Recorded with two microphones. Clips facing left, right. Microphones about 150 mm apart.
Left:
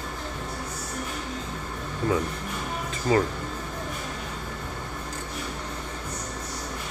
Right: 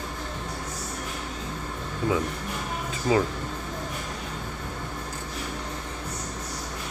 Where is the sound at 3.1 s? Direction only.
10° right (ahead or behind).